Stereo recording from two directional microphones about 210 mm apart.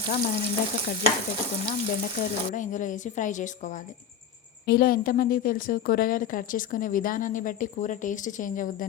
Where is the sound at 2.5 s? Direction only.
35° left (ahead or behind).